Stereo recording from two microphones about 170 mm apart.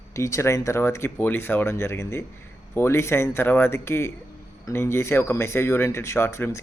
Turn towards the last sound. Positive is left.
turn(degrees=15)  # may be behind; listen again after turning